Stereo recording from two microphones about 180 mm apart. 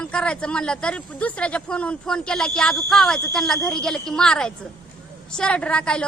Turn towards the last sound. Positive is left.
turn(degrees=5)  # may be behind; listen again after turning